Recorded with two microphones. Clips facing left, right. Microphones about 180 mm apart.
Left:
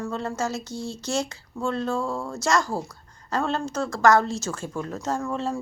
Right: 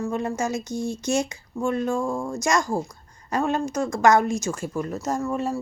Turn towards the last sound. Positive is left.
turn(degrees=-10)  # may be behind; listen again after turning